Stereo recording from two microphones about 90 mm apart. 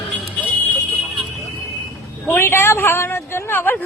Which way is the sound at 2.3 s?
25° left (ahead or behind).